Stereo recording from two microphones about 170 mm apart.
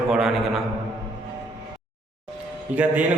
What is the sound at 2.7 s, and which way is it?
Speech, 45° right (ahead or behind).